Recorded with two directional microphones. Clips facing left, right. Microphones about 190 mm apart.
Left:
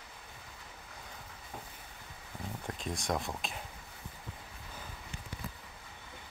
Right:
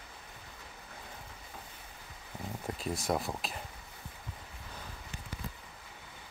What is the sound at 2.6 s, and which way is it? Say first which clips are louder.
Speech: right 3 dB; 5° right (ahead or behind).